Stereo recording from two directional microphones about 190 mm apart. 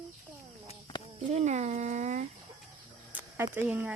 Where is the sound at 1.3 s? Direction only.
35° right (ahead or behind).